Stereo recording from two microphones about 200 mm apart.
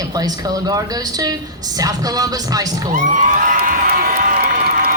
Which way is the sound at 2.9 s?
40° right (ahead or behind).